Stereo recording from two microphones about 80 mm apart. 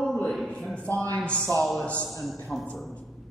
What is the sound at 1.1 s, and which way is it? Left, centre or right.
Speech, centre.